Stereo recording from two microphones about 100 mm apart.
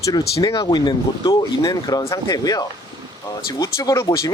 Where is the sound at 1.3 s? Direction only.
40° left (ahead or behind).